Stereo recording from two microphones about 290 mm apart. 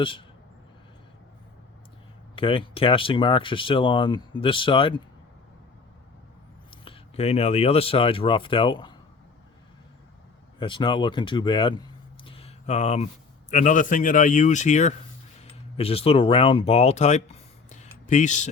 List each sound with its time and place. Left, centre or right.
0.0 s speech: centre
2.3 s speech: centre
6.7 s speech: centre
10.6 s speech: centre